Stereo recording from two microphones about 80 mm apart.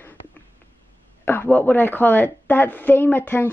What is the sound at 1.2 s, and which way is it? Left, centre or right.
A woman's voice, left.